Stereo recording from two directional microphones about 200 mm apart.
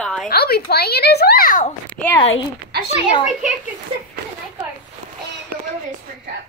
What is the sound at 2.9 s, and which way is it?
Speech, 25° left (ahead or behind).